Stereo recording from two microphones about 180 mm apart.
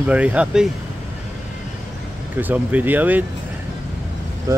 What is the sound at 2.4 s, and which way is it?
Speech, 10° right (ahead or behind).